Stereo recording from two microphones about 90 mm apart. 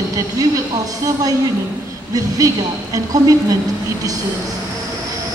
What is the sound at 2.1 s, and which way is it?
A woman's voice, 40° right (ahead or behind).